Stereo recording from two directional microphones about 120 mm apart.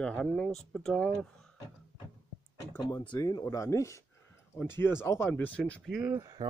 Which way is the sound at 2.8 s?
35° left (ahead or behind).